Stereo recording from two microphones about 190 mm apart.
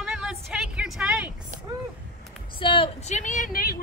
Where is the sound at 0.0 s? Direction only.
5° right (ahead or behind).